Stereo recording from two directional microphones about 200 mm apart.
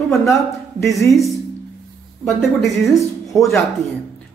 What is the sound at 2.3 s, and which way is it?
Speech, centre (ahead or behind).